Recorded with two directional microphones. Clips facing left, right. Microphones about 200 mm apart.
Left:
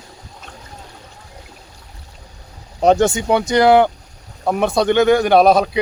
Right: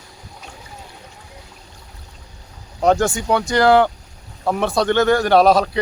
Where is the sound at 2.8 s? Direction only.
20° left (ahead or behind).